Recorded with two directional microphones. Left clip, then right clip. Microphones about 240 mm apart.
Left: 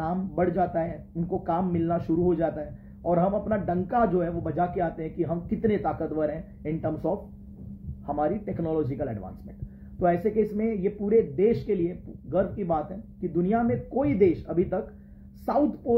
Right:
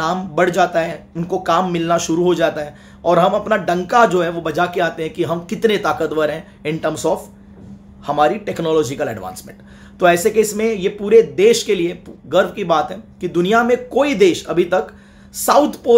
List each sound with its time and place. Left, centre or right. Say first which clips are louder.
0.0 s a man's voice: right 11 dB; right
8.1 s a man's voice: right 12 dB; right